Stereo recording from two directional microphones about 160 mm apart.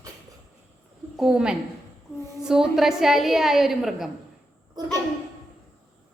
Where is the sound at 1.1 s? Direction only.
5° right (ahead or behind).